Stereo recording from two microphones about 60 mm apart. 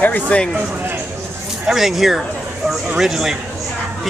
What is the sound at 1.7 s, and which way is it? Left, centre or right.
A man's voice, centre.